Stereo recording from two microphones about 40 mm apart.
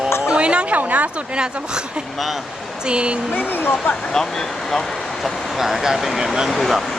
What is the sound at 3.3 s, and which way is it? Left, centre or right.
Speech, left.